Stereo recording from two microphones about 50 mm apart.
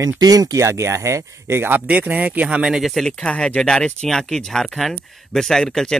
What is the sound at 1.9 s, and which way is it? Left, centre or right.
Speech, right.